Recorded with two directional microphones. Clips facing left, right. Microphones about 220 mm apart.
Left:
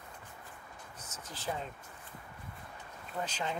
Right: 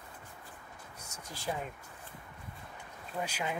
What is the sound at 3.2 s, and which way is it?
Speech, 10° right (ahead or behind).